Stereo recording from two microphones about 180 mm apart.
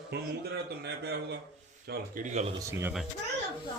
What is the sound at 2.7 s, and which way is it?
Speech, 15° right (ahead or behind).